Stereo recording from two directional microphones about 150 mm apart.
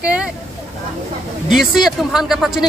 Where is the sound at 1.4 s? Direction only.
5° right (ahead or behind).